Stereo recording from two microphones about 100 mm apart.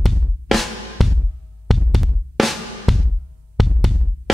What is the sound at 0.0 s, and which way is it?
Drum, centre (ahead or behind).